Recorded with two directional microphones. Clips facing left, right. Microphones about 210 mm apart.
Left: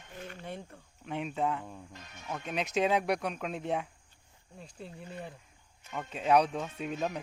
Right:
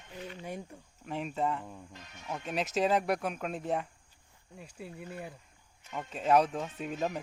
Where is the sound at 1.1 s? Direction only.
Centre (ahead or behind).